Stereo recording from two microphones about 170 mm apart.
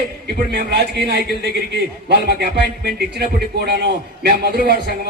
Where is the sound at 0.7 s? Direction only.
75° right (ahead or behind).